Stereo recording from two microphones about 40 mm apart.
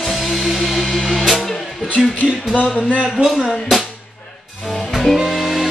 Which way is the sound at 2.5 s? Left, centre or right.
Left.